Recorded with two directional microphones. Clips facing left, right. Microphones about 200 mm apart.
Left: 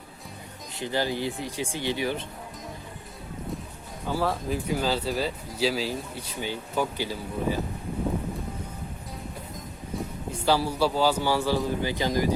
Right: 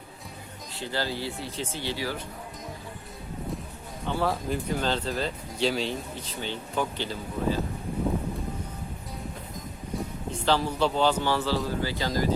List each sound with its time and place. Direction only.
0.7 s a man's voice: 15° left (ahead or behind)
4.0 s speech: 5° left (ahead or behind)
10.4 s a man's voice: 10° left (ahead or behind)